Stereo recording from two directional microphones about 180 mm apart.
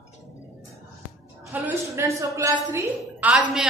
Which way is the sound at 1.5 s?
10° right (ahead or behind).